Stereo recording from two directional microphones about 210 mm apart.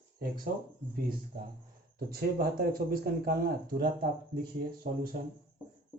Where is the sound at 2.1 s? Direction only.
45° right (ahead or behind).